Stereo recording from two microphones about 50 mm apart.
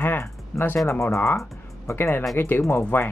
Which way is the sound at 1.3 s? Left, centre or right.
Left.